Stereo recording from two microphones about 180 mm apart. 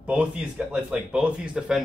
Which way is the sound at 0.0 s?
5° right (ahead or behind).